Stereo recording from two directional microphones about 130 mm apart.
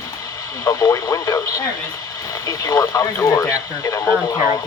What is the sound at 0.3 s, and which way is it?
Speech, 25° left (ahead or behind).